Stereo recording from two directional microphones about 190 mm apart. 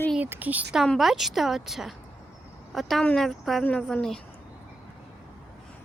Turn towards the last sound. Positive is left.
turn(degrees=5)  # may be behind; listen again after turning